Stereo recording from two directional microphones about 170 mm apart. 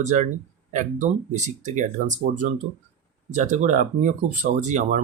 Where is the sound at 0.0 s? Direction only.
45° right (ahead or behind).